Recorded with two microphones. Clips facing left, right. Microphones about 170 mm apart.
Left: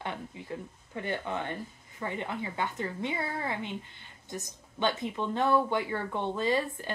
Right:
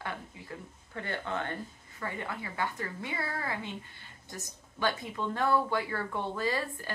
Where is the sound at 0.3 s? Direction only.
20° left (ahead or behind).